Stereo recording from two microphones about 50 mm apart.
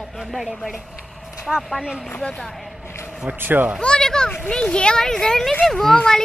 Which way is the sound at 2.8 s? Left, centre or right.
Left.